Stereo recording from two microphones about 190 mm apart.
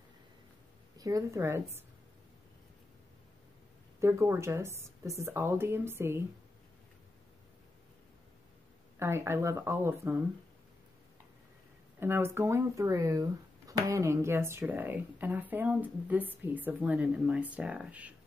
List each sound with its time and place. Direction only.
0.9 s speech: 15° right (ahead or behind)
4.0 s speech: 15° right (ahead or behind)
9.0 s speech: 15° right (ahead or behind)
12.0 s speech: 10° right (ahead or behind)